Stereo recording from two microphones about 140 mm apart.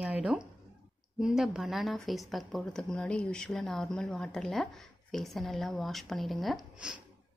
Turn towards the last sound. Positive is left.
turn(degrees=0)  # may be behind; listen again after turning